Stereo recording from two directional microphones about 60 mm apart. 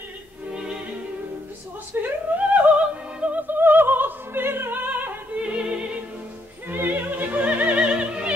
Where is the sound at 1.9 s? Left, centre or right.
Right.